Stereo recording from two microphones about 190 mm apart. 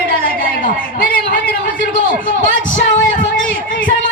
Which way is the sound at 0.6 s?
50° left (ahead or behind).